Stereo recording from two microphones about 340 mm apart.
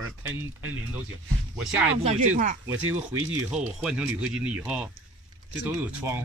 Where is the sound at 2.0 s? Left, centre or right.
Centre.